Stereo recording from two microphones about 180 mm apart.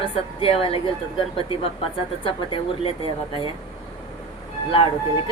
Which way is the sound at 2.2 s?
30° left (ahead or behind).